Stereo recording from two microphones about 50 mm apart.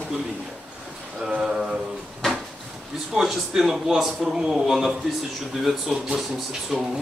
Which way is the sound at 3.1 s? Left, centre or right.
Centre.